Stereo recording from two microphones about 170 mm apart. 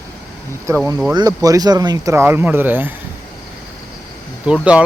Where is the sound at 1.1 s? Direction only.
20° right (ahead or behind).